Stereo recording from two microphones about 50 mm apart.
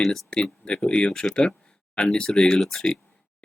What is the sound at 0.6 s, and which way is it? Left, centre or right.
Speech, centre.